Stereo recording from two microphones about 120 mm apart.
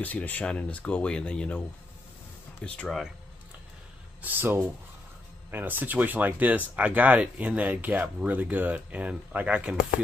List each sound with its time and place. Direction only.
0.0 s speech: 15° left (ahead or behind)
2.6 s speech: 10° left (ahead or behind)
4.2 s speech: 15° right (ahead or behind)